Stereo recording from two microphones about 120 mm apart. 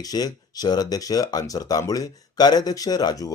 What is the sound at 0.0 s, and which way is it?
Speech, 30° left (ahead or behind).